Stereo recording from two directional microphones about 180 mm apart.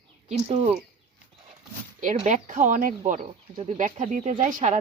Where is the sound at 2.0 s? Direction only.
45° right (ahead or behind).